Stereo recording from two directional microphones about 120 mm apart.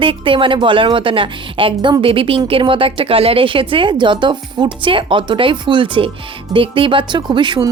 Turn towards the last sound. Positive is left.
turn(degrees=-40)  # may be behind; listen again after turning